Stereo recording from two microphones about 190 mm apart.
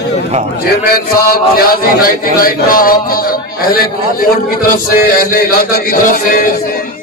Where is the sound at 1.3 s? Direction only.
50° left (ahead or behind).